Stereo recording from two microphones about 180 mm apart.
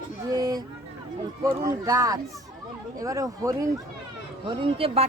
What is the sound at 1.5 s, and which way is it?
Speech, 20° right (ahead or behind).